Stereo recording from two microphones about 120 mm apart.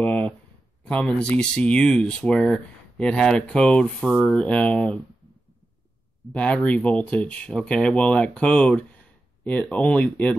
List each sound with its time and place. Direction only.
0.0 s a sound: 10° left (ahead or behind)
0.8 s speech: 10° left (ahead or behind)
6.3 s speech: 10° left (ahead or behind)